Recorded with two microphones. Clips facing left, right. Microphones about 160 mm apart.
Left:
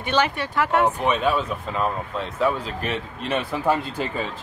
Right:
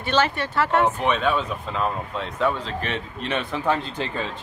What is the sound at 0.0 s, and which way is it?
Speech, 15° left (ahead or behind).